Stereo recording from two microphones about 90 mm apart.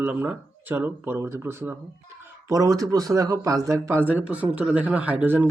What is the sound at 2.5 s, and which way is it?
Speech, 40° right (ahead or behind).